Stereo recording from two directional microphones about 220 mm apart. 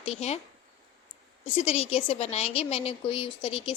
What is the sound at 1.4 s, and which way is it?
A woman's voice, 25° left (ahead or behind).